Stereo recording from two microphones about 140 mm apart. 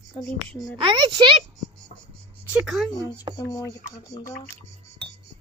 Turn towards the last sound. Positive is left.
turn(degrees=25)  # may be behind; listen again after turning